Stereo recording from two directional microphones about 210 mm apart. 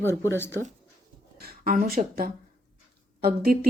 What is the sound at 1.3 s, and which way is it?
Speech, 45° right (ahead or behind).